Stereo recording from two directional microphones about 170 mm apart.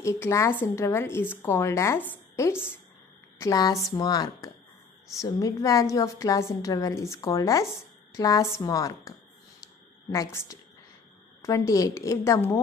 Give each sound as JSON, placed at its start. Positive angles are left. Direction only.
{"t": 0.0, "sound": "a woman's voice", "side_deg": 15}
{"t": 10.1, "sound": "a woman's voice", "side_deg": 20}